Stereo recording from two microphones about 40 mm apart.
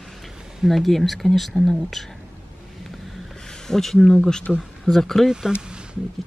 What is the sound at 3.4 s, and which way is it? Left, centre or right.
Speech, centre.